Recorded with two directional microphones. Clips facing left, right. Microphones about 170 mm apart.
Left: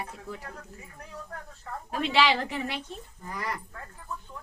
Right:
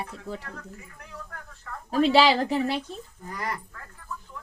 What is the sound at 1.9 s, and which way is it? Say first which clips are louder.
Speech: right 6 dB; 35° right (ahead or behind).